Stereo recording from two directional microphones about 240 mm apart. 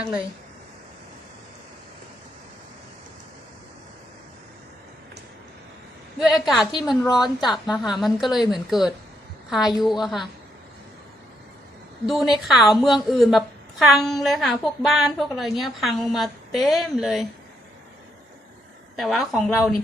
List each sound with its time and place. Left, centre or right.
6.1 s a woman's voice: centre
6.7 s a woman's voice: centre
7.7 s a woman's voice: centre
12.0 s a woman's voice: centre
18.9 s a woman's voice: centre